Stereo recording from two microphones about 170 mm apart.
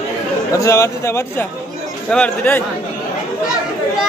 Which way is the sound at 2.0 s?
5° left (ahead or behind).